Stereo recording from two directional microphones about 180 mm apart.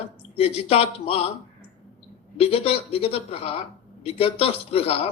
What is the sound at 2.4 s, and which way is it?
Speech, 35° left (ahead or behind).